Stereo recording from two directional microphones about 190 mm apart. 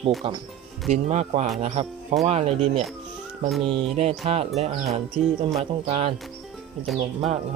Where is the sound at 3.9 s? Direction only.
35° right (ahead or behind).